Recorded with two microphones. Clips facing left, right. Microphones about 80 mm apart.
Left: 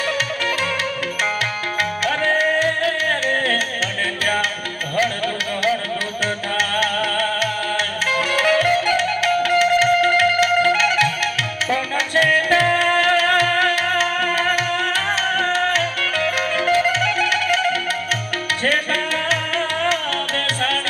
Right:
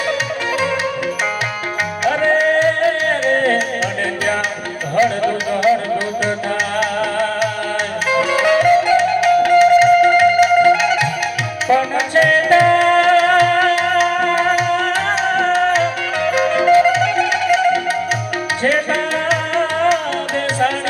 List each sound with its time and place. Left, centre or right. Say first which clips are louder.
2.0 s music: right 6 dB; centre
4.9 s music: right 6 dB; centre
19.3 s music: right 5 dB; centre